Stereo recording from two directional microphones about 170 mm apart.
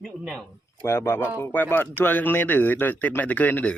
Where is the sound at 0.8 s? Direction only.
15° left (ahead or behind).